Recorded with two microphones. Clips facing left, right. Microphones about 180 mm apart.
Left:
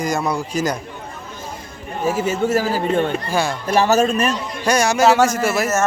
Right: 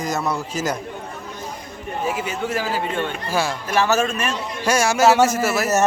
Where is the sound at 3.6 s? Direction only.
35° left (ahead or behind).